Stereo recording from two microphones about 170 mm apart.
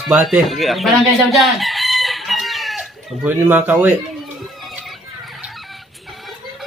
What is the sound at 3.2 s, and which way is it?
Speech, 10° right (ahead or behind).